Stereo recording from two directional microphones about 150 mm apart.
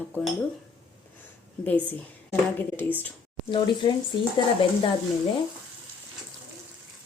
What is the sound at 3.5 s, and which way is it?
Speech, 30° left (ahead or behind).